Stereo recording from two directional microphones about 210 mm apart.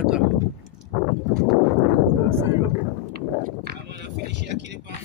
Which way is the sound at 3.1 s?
50° right (ahead or behind).